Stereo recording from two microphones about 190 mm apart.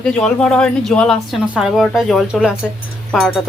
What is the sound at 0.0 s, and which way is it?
Speech, 5° left (ahead or behind).